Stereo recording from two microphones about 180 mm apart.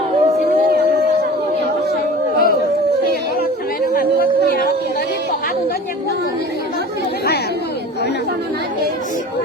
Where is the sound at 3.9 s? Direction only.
55° left (ahead or behind).